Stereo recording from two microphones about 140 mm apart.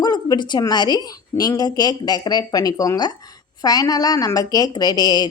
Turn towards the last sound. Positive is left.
turn(degrees=30)  # may be behind; listen again after turning